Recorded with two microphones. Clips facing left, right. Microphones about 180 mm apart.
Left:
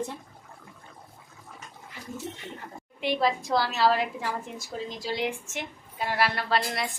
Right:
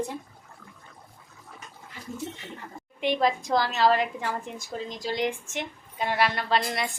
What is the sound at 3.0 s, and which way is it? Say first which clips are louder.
A woman's voice: right 1 dB; 5° left (ahead or behind).